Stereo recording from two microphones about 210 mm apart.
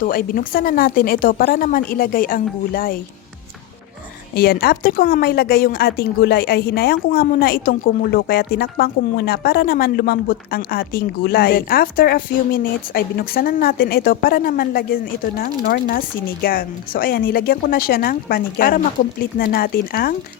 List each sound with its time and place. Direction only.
0.0 s a woman's voice: 40° left (ahead or behind)
4.4 s a woman's voice: 45° left (ahead or behind)